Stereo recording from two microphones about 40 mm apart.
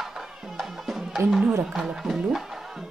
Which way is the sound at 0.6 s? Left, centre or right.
Centre.